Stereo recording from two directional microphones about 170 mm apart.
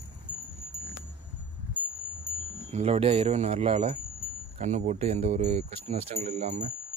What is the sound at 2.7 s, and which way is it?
Speech, 35° right (ahead or behind).